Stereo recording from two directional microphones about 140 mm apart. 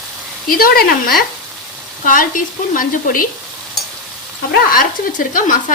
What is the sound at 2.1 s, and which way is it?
Speech, 75° left (ahead or behind).